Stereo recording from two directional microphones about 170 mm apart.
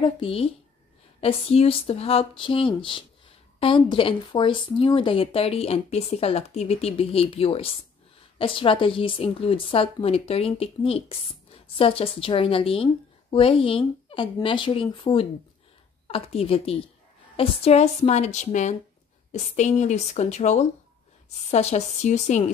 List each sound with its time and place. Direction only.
0.0 s a woman's voice: 35° left (ahead or behind)